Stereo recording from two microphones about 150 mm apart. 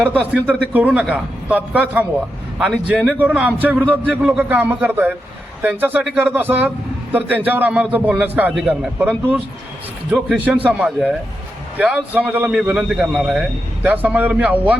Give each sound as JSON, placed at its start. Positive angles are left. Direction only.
{"t": 0.0, "sound": "a man's voice", "side_deg": -10}